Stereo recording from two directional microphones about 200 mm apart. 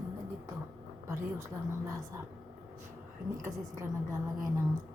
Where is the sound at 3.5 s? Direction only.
15° right (ahead or behind).